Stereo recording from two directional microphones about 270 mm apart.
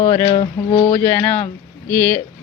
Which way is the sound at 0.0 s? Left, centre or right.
Centre.